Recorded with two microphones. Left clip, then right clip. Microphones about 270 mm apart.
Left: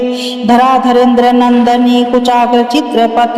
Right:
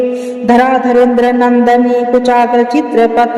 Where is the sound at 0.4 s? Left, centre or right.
Centre.